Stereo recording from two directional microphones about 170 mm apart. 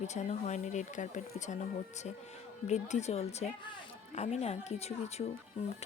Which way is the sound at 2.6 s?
45° left (ahead or behind).